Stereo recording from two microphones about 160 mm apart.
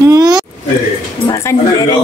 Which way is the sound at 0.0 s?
25° right (ahead or behind).